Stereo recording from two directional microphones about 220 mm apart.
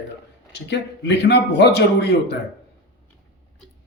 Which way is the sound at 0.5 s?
50° left (ahead or behind).